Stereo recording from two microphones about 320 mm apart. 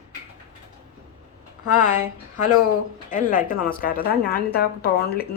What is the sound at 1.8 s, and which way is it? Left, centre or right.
Speech, left.